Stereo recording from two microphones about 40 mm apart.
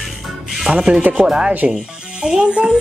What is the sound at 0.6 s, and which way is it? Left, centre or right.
A child's voice, right.